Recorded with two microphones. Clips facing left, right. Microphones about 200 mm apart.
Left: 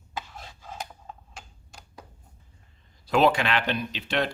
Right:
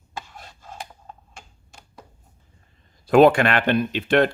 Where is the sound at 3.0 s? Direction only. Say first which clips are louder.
Right 8 dB; 50° right (ahead or behind).